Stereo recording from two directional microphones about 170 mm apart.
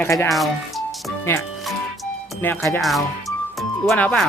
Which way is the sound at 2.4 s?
10° left (ahead or behind).